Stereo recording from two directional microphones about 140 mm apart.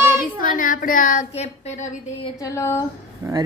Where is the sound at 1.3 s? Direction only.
50° left (ahead or behind).